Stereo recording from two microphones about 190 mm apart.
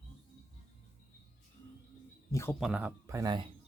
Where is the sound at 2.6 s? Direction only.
5° right (ahead or behind).